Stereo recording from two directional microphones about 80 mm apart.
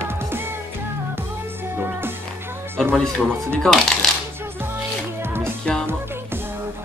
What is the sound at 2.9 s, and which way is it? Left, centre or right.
Speech, centre.